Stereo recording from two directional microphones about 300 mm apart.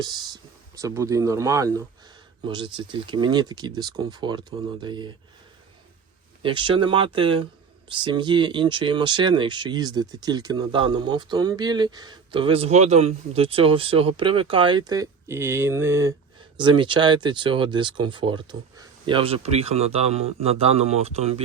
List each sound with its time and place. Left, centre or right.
0.0 s speech: centre
6.4 s speech: centre